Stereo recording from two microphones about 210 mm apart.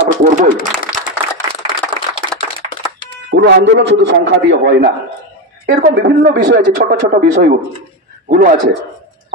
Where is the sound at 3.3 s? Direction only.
60° right (ahead or behind); by 8.6 s 40° right (ahead or behind).